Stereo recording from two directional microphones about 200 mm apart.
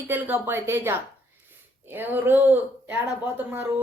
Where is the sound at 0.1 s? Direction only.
10° right (ahead or behind).